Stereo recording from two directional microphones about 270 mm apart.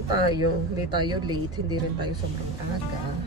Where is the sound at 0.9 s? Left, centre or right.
Centre.